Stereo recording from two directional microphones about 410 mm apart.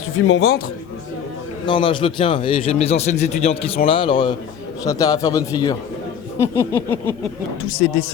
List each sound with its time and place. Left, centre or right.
0.3 s a man's voice: left
1.6 s a man's voice: centre